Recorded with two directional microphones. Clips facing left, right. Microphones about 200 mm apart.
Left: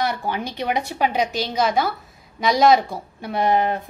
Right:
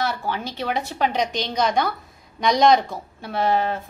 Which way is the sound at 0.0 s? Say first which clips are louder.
Left 2 dB; 15° left (ahead or behind).